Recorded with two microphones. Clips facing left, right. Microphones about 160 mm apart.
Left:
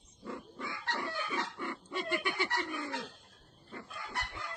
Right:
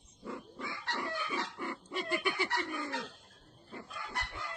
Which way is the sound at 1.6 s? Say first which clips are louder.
Even; 25° right (ahead or behind).